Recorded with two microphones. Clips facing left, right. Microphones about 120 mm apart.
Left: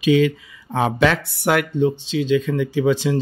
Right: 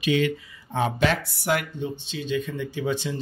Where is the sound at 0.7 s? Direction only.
90° left.